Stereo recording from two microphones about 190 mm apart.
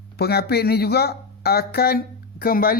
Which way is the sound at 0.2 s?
55° left (ahead or behind).